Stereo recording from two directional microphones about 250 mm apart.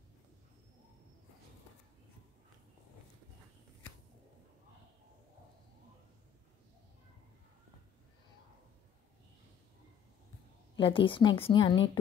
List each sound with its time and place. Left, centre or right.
10.8 s a woman's voice: left